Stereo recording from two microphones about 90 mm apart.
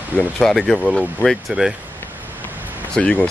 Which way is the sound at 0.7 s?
15° left (ahead or behind).